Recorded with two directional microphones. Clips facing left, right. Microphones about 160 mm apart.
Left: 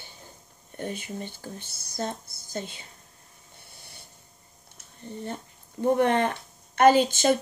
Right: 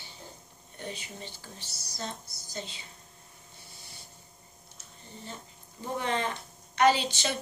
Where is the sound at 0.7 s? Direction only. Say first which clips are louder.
Left 7 dB; 50° left (ahead or behind).